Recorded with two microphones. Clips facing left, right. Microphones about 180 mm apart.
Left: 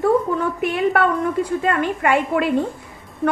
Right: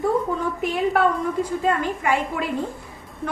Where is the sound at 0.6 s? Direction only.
65° left (ahead or behind).